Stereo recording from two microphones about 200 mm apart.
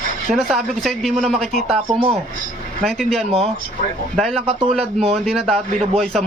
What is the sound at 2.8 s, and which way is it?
Speech, centre (ahead or behind).